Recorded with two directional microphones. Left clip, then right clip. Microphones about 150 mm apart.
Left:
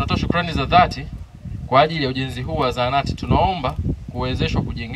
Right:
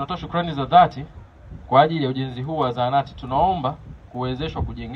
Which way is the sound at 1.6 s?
40° left (ahead or behind).